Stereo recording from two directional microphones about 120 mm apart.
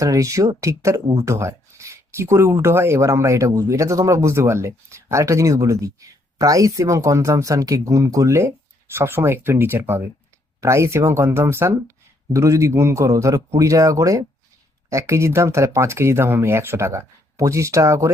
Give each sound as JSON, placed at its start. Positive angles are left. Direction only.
{"t": 0.0, "sound": "speech", "side_deg": -25}